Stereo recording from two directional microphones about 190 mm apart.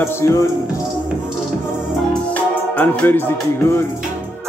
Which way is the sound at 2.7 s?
10° left (ahead or behind).